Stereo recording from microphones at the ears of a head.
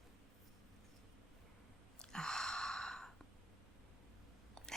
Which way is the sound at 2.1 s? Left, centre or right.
Centre.